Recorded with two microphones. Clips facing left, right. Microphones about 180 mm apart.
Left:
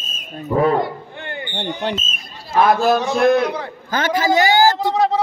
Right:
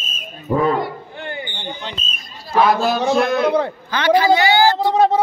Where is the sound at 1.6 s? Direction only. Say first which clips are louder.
Left 7 dB; 65° left (ahead or behind).